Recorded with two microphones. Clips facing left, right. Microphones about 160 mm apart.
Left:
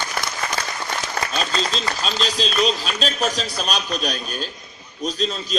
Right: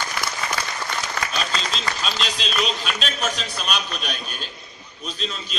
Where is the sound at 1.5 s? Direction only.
35° left (ahead or behind).